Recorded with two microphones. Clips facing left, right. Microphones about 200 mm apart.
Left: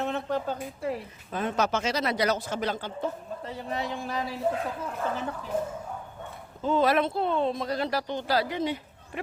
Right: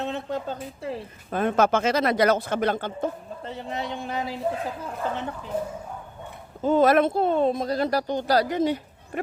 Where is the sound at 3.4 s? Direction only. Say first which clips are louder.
Right 1 dB; 25° right (ahead or behind).